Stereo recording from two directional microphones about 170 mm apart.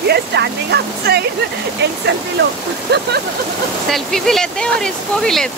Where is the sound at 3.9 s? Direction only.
Centre (ahead or behind).